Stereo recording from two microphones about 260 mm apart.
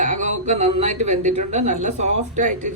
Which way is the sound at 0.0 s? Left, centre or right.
Right.